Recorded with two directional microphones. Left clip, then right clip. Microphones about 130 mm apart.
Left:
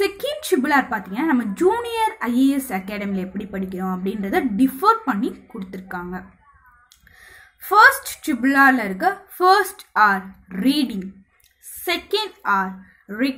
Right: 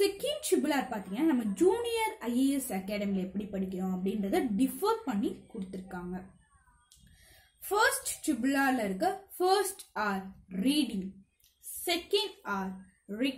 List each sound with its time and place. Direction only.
0.0 s a woman's voice: 15° right (ahead or behind)
7.7 s a woman's voice: 15° right (ahead or behind)